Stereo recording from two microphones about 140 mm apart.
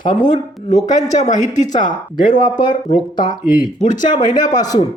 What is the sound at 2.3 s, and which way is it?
Speech, 30° left (ahead or behind).